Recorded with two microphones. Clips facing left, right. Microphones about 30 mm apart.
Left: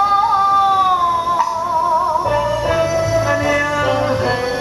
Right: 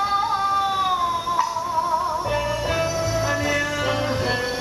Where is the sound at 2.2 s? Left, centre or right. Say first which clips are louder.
Left 7 dB; centre.